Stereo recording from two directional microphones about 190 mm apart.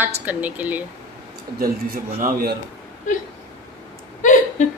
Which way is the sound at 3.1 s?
40° left (ahead or behind).